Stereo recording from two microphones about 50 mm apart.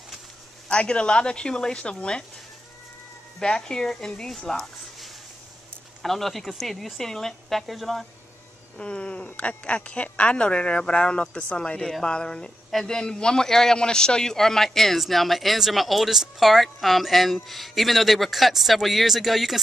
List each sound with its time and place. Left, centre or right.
0.7 s a woman's voice: centre
3.3 s a man's voice: centre
8.7 s a woman's voice: left; by 19.6 s centre